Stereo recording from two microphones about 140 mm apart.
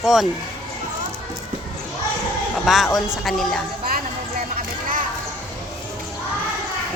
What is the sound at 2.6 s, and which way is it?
Speech, centre (ahead or behind).